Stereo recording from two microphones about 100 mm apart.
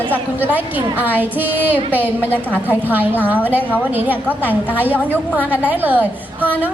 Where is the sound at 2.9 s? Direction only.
15° right (ahead or behind).